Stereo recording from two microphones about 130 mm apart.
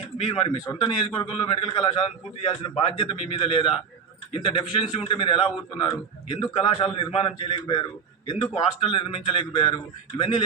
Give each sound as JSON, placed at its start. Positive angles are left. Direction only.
{"t": 0.3, "sound": "a man's voice", "side_deg": 40}